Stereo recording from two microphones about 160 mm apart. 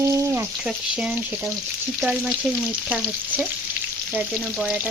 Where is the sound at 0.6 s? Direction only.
5° right (ahead or behind).